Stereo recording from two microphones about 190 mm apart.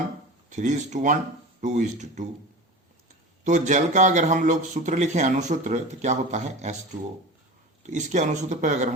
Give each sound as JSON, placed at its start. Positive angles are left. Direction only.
{"t": 0.5, "sound": "a man's voice", "side_deg": -40}
{"t": 3.4, "sound": "a man's voice", "side_deg": -40}
{"t": 7.9, "sound": "a man's voice", "side_deg": -40}